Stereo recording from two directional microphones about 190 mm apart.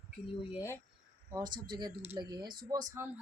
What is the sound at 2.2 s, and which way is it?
Speech, 20° right (ahead or behind).